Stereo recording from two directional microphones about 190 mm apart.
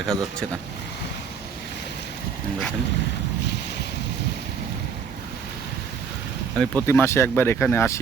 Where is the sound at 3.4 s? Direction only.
65° left (ahead or behind).